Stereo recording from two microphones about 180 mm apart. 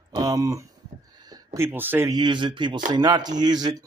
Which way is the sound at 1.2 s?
20° right (ahead or behind).